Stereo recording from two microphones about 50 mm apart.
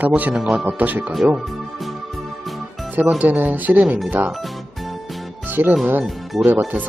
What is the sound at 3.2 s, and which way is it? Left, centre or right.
Speech, right.